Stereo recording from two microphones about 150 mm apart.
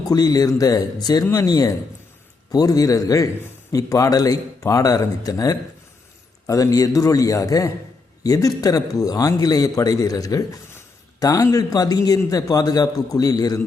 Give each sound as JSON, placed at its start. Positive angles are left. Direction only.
{"t": 0.1, "sound": "a man's voice", "side_deg": 25}